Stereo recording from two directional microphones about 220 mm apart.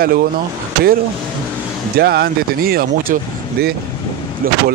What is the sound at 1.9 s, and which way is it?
Speech, 45° right (ahead or behind).